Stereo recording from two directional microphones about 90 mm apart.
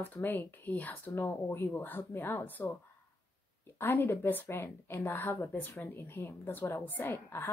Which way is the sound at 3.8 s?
25° left (ahead or behind).